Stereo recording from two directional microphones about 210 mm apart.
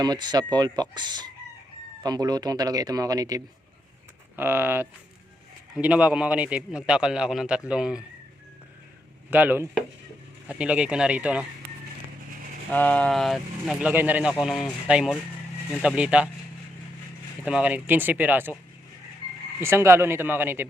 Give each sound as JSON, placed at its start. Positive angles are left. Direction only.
{"t": 0.0, "sound": "a man's voice", "side_deg": -20}
{"t": 9.3, "sound": "a man's voice", "side_deg": -10}
{"t": 12.7, "sound": "a man's voice", "side_deg": 5}
{"t": 17.4, "sound": "speech", "side_deg": -5}
{"t": 19.5, "sound": "speech", "side_deg": -10}